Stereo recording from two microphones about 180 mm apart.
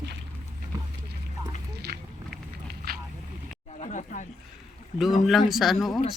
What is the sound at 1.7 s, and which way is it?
Walk, 65° right (ahead or behind).